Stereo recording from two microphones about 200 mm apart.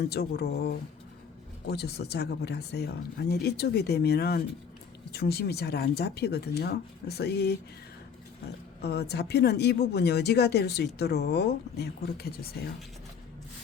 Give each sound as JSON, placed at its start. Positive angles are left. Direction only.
{"t": 0.1, "sound": "speech", "side_deg": 55}
{"t": 8.8, "sound": "speech", "side_deg": 55}